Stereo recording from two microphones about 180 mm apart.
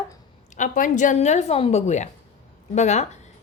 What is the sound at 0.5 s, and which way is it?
A woman's voice, 45° left (ahead or behind).